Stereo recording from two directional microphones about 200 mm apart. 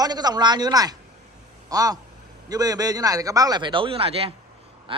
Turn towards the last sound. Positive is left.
turn(degrees=-25)  # may be behind; listen again after turning